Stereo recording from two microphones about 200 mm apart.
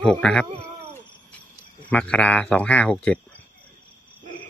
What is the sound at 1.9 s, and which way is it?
Speech, 5° left (ahead or behind).